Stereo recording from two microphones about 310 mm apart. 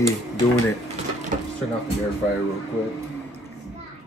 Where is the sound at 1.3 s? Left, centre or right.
Right.